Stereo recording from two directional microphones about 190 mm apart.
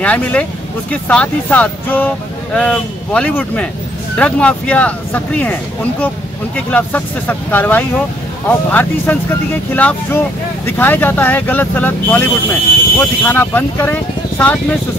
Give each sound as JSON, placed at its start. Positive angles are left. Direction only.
{"t": 0.0, "sound": "speech", "side_deg": 5}